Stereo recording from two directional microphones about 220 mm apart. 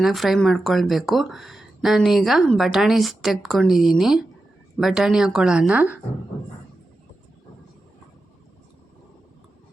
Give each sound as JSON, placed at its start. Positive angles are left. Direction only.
{"t": 0.0, "sound": "speech", "side_deg": 0}